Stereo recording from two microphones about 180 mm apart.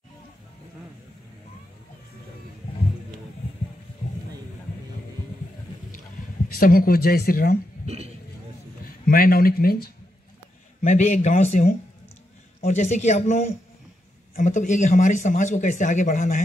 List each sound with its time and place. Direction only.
6.5 s speech: 55° left (ahead or behind)
7.8 s a sound: 35° right (ahead or behind)
8.8 s speech: 55° left (ahead or behind)
10.8 s speech: 40° left (ahead or behind)